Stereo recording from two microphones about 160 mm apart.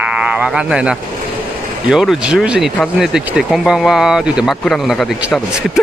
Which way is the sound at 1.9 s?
5° right (ahead or behind).